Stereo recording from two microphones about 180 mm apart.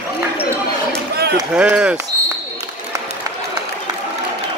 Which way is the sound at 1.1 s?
60° right (ahead or behind).